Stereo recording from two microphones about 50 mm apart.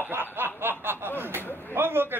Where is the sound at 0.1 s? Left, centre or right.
Right.